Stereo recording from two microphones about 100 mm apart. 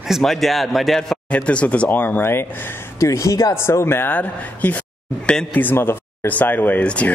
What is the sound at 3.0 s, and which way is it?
Speech, 35° left (ahead or behind).